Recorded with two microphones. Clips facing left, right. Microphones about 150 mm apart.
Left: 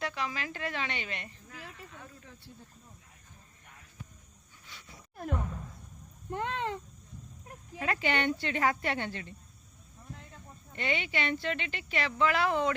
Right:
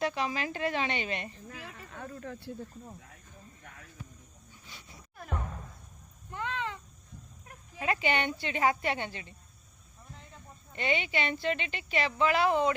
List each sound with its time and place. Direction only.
0.0 s speech: 25° right (ahead or behind)
1.7 s speech: 55° right (ahead or behind); by 2.9 s 70° right (ahead or behind)
6.3 s speech: 50° left (ahead or behind)
7.8 s speech: 15° right (ahead or behind)
10.7 s speech: 20° right (ahead or behind)